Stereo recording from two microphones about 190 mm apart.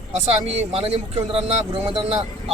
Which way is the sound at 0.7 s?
35° right (ahead or behind).